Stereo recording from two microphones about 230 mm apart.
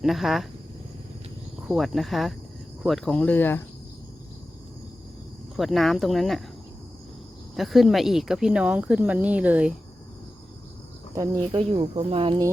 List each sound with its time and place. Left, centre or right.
0.0 s speech: centre
1.6 s speech: centre
5.5 s speech: centre
7.5 s speech: centre
11.1 s speech: centre